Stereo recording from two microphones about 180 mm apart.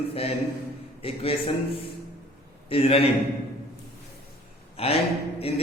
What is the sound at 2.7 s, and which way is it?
Speech, 30° left (ahead or behind).